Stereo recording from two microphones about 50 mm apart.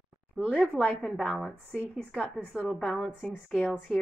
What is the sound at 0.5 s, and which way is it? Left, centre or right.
A woman's voice, centre.